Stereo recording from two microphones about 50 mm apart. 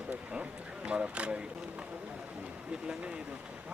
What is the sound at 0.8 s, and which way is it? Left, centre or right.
Speech, right.